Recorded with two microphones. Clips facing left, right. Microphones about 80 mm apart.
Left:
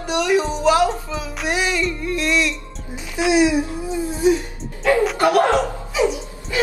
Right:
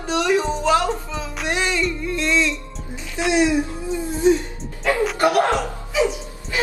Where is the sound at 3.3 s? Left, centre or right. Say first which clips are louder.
Left 2 dB; centre.